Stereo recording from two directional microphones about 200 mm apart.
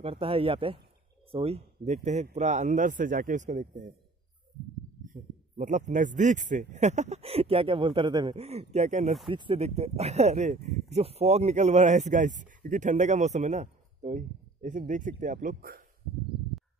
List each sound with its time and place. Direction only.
0.0 s speech: 30° right (ahead or behind)
5.0 s speech: 40° right (ahead or behind)